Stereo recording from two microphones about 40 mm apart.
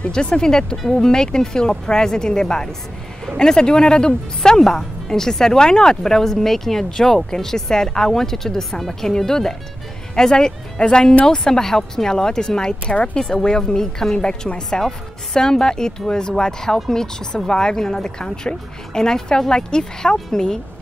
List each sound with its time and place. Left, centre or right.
0.1 s speech: centre